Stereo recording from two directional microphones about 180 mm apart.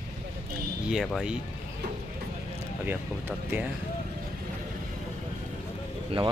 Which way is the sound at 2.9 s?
10° right (ahead or behind).